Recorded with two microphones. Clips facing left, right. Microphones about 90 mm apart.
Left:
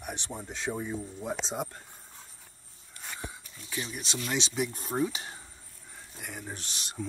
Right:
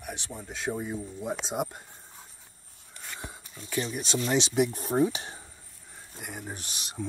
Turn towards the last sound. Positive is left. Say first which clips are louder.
# right 1 dB
turn(degrees=-5)  # may be behind; listen again after turning